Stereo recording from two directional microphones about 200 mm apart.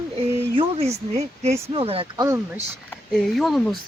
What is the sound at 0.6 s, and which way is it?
Speech, 30° right (ahead or behind).